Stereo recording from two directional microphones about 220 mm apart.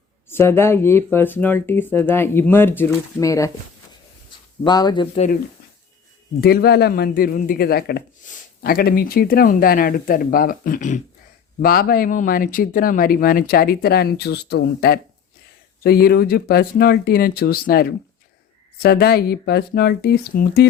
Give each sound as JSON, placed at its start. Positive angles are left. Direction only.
{"t": 0.3, "sound": "speech", "side_deg": 10}
{"t": 4.6, "sound": "speech", "side_deg": 20}
{"t": 6.4, "sound": "speech", "side_deg": 45}